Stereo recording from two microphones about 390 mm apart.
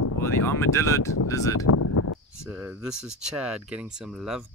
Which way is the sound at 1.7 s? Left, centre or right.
Left.